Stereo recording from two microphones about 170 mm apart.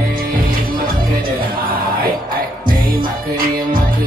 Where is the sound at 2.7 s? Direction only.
55° right (ahead or behind).